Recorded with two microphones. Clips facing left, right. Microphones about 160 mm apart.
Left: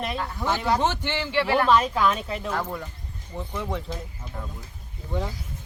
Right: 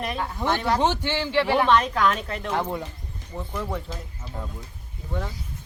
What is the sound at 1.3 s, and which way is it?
Speech, 10° left (ahead or behind).